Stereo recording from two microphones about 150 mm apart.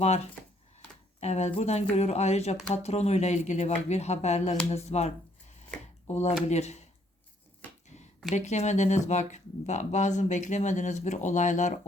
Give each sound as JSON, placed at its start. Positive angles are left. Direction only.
{"t": 0.0, "sound": "speech", "side_deg": 45}
{"t": 4.7, "sound": "a sound", "side_deg": 45}
{"t": 6.1, "sound": "speech", "side_deg": 45}
{"t": 8.3, "sound": "speech", "side_deg": 50}